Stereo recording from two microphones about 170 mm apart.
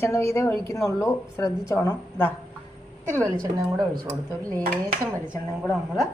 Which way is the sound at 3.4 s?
25° right (ahead or behind).